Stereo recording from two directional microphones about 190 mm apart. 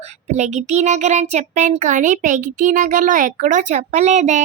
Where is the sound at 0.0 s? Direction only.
35° right (ahead or behind).